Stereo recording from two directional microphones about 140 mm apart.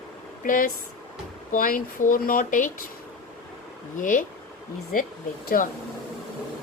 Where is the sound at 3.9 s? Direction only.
70° left (ahead or behind).